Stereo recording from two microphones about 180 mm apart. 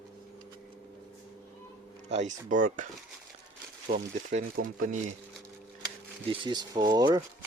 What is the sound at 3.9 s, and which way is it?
Speech, 55° right (ahead or behind).